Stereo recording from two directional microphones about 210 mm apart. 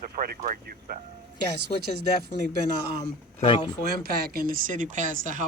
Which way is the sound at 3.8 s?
45° right (ahead or behind).